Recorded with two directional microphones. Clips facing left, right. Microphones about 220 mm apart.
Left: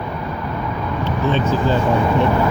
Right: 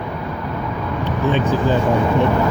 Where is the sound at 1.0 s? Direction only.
15° right (ahead or behind).